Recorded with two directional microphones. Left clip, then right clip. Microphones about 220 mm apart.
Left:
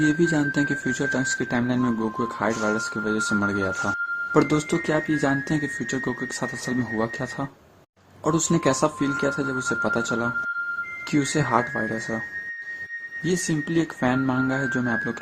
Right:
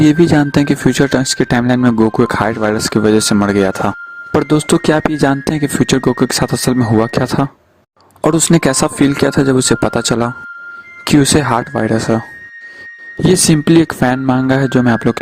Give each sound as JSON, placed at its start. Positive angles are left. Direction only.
{"t": 0.0, "sound": "speech", "side_deg": -45}
{"t": 13.5, "sound": "speech", "side_deg": -45}